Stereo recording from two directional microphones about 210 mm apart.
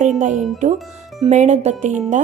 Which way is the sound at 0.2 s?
35° right (ahead or behind).